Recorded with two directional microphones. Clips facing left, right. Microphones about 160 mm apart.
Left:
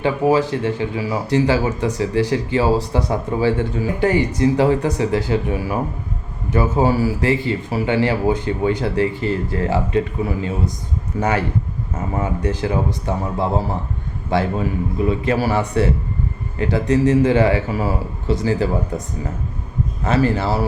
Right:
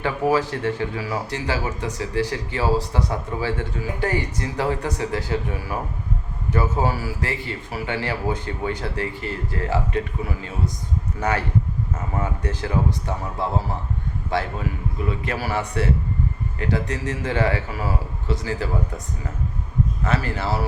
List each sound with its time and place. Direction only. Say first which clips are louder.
0.0 s speech: left 4 dB; 25° left (ahead or behind)
20.1 s speech: left 9 dB; 30° left (ahead or behind)